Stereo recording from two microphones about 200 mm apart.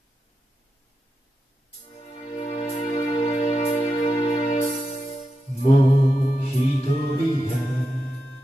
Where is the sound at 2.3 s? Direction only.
30° left (ahead or behind).